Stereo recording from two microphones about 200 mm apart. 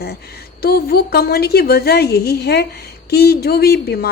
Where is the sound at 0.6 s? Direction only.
50° left (ahead or behind).